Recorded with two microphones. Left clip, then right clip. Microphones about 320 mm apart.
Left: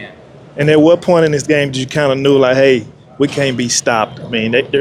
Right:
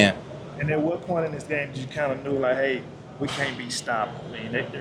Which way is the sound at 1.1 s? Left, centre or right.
Left.